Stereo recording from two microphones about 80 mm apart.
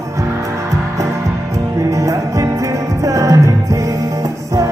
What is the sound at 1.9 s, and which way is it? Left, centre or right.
Music, right.